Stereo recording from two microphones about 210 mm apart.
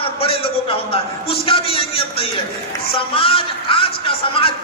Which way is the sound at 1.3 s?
25° left (ahead or behind).